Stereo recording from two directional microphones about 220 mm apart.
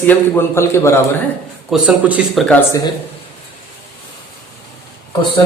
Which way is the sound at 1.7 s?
5° right (ahead or behind).